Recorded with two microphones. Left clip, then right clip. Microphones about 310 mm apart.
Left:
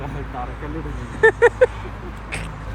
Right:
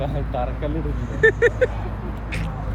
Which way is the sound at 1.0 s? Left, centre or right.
Right.